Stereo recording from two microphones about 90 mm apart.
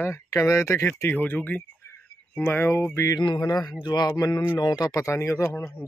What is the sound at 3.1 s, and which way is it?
Speech, 50° left (ahead or behind).